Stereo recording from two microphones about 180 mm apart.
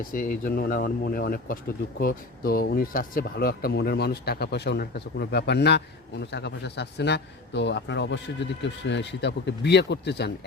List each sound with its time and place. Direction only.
0.1 s speech: 50° left (ahead or behind); by 10.3 s 70° left (ahead or behind)